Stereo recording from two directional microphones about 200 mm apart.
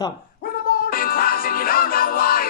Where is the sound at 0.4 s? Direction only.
45° left (ahead or behind).